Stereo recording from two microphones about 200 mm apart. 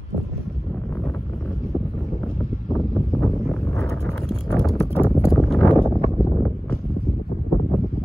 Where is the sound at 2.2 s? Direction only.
5° left (ahead or behind).